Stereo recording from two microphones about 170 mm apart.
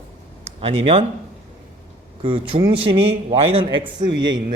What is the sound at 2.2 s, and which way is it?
A woman's voice, 30° right (ahead or behind).